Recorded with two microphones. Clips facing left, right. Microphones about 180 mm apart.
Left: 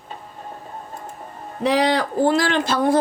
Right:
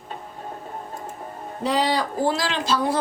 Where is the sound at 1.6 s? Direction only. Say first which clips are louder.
Left 4 dB; 70° left (ahead or behind).